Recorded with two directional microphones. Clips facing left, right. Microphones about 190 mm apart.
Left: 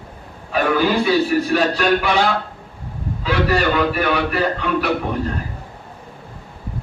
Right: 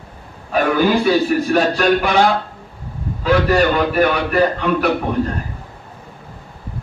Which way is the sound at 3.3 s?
45° right (ahead or behind).